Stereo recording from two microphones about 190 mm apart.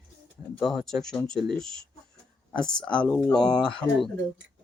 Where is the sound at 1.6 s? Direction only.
90° right.